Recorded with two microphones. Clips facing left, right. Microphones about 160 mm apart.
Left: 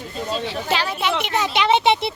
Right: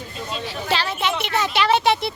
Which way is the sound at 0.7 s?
10° left (ahead or behind).